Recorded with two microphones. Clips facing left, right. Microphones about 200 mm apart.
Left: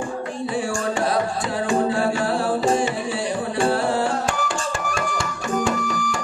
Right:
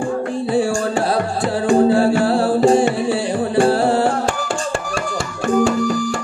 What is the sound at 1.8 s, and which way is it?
Music, 30° right (ahead or behind).